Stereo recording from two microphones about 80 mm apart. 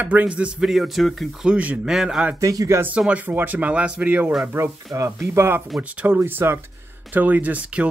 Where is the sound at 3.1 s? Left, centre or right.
Right.